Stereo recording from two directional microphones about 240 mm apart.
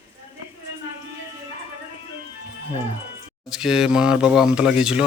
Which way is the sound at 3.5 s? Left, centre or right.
Centre.